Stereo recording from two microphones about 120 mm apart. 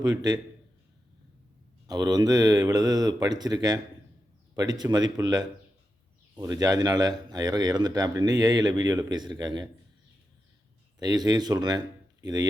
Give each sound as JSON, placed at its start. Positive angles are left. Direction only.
{"t": 0.0, "sound": "a man's voice", "side_deg": -35}
{"t": 1.9, "sound": "a man's voice", "side_deg": -30}
{"t": 11.0, "sound": "a man's voice", "side_deg": -35}